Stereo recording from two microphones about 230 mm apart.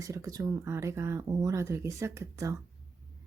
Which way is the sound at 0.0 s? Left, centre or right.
Centre.